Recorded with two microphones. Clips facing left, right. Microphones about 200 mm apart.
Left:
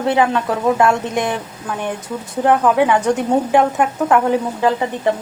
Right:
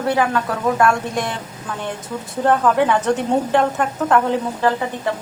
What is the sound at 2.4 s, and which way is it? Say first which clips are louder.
A woman's voice: left 2 dB; 15° left (ahead or behind).